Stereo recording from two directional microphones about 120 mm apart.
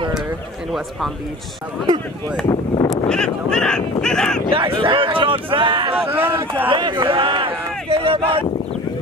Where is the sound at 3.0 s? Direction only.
5° left (ahead or behind).